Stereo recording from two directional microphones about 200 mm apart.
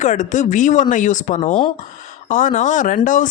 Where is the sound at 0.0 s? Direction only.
40° left (ahead or behind).